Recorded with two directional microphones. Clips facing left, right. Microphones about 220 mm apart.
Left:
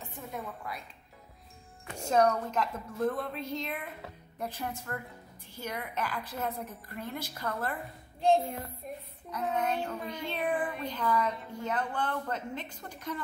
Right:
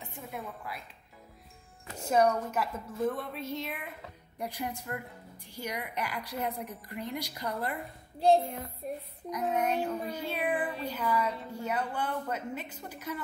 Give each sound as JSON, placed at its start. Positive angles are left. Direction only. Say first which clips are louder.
{"t": 0.0, "sound": "a woman's voice", "louder": "left 1 dB", "side_deg": -10}
{"t": 2.0, "sound": "a woman's voice", "louder": "even", "side_deg": -10}
{"t": 8.8, "sound": "child singing", "louder": "right 8 dB", "side_deg": -35}
{"t": 9.3, "sound": "a woman's voice", "louder": "right 2 dB", "side_deg": -10}